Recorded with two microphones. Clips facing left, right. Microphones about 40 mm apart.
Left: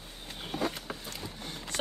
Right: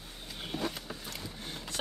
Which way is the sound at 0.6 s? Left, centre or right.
Left.